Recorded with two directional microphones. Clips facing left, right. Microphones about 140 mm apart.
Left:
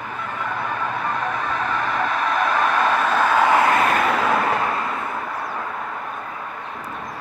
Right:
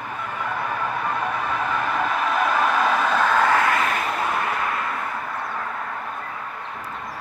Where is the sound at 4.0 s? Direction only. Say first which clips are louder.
Left 5 dB; 90° left.